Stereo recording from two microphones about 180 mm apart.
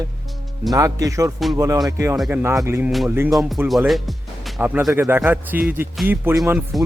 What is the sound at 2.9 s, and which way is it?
Speech, centre (ahead or behind).